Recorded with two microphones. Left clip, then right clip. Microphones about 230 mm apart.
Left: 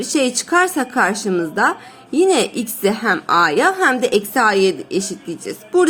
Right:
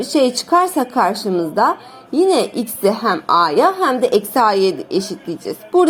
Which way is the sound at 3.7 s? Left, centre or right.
Left.